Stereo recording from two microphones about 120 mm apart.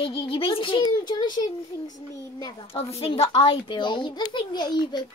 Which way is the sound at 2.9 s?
55° left (ahead or behind).